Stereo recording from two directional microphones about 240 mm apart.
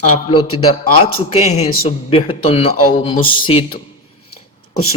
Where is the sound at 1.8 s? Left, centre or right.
Left.